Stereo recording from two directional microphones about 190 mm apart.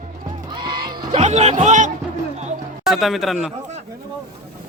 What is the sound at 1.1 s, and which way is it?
Speech, 35° right (ahead or behind).